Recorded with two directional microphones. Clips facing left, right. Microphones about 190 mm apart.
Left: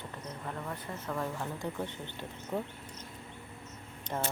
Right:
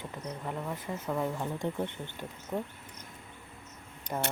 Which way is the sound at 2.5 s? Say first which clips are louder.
Right 1 dB; 5° right (ahead or behind).